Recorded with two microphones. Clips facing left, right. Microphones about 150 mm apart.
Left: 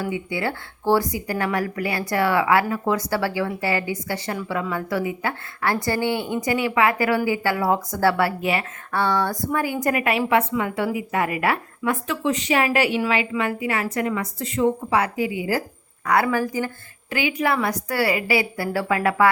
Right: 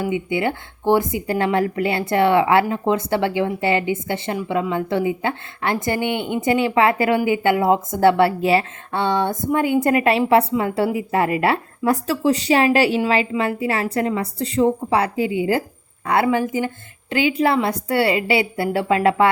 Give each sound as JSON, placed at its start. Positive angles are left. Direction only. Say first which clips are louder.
{"t": 0.0, "sound": "a woman's voice", "louder": "right 4 dB", "side_deg": -20}